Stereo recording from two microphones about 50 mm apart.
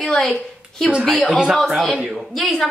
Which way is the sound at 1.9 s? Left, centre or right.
Centre.